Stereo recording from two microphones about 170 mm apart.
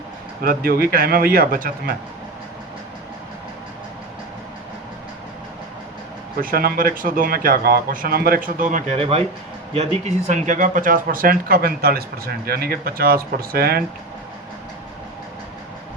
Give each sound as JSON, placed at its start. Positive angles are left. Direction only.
{"t": 0.4, "sound": "speech", "side_deg": -60}
{"t": 6.4, "sound": "speech", "side_deg": -60}
{"t": 9.0, "sound": "speech", "side_deg": -35}